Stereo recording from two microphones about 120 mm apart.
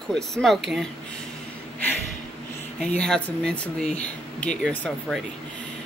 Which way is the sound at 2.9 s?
5° left (ahead or behind).